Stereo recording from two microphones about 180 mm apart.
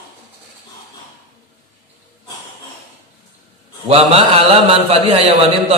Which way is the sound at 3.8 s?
35° right (ahead or behind).